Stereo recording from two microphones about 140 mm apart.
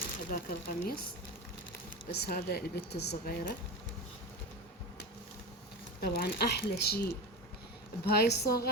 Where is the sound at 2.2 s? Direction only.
90° left.